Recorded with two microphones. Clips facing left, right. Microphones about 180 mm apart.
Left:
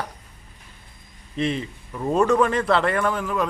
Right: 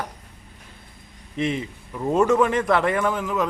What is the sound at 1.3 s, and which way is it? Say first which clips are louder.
A man's voice: even; 15° right (ahead or behind).